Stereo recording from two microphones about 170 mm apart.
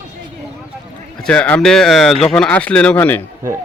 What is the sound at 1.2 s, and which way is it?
Speech, 5° left (ahead or behind).